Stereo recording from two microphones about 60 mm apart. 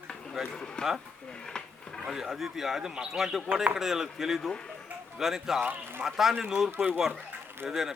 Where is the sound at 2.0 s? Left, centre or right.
Centre.